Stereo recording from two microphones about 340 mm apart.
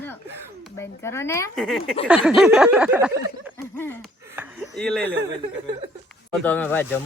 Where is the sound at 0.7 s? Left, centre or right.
Centre.